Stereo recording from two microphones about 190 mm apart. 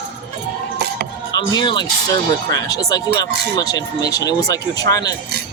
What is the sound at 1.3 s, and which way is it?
Speech, 20° left (ahead or behind).